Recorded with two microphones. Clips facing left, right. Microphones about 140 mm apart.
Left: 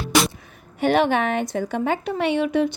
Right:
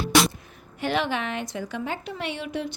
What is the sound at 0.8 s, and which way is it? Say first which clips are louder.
A woman's voice: left 7 dB; 55° left (ahead or behind).